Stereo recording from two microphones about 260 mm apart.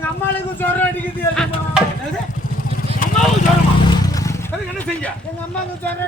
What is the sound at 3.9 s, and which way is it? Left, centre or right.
Music, centre.